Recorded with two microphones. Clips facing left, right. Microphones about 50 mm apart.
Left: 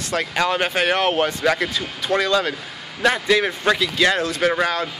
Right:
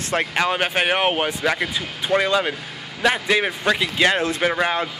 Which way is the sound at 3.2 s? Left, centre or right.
Centre.